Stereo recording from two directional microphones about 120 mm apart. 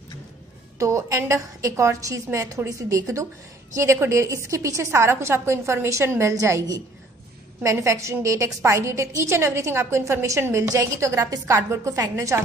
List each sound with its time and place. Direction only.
0.7 s a woman's voice: 25° right (ahead or behind)